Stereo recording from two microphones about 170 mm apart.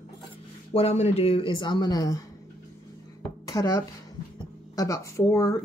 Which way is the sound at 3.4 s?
20° left (ahead or behind).